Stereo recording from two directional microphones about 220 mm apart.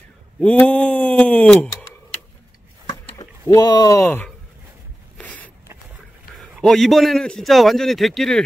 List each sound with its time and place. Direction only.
0.4 s speech: 5° left (ahead or behind)
2.9 s a sound: 20° left (ahead or behind)
6.3 s a man's voice: centre (ahead or behind)